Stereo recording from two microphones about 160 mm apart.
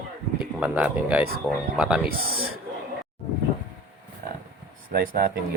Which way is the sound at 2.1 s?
70° right (ahead or behind).